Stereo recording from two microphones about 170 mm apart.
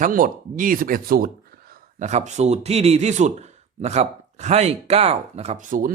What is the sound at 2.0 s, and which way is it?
Speech, 45° right (ahead or behind).